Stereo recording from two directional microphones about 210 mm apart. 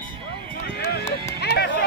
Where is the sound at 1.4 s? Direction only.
50° left (ahead or behind).